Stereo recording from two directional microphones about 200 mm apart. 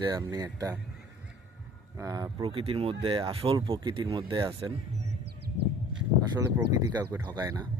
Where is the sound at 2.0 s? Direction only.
15° right (ahead or behind).